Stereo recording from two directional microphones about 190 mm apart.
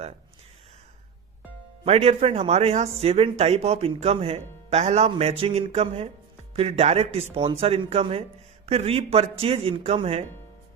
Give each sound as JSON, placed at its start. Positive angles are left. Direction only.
{"t": 1.8, "sound": "speech", "side_deg": -30}